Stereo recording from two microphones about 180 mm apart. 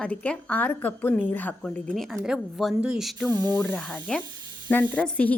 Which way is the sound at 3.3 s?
20° right (ahead or behind).